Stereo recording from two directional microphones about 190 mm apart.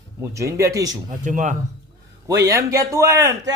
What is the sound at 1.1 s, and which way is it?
Speech, 40° right (ahead or behind).